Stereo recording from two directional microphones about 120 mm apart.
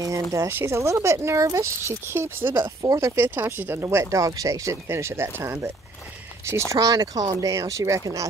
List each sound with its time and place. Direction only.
0.0 s speech: 25° right (ahead or behind)
2.8 s speech: 30° right (ahead or behind)
3.3 s speech: 20° right (ahead or behind)
6.7 s speech: 30° right (ahead or behind)